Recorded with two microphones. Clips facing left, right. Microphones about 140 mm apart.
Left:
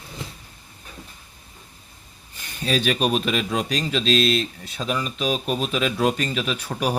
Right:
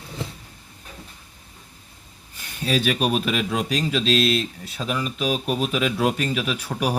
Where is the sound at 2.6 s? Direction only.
5° right (ahead or behind).